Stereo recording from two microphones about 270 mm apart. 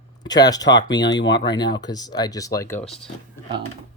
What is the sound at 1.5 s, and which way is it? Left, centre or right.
Speech, centre.